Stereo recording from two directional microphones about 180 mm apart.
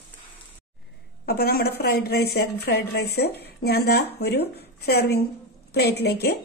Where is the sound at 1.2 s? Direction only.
60° left (ahead or behind).